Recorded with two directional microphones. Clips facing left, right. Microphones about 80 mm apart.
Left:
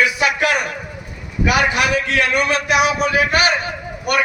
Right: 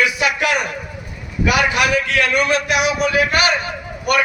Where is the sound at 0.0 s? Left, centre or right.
Left.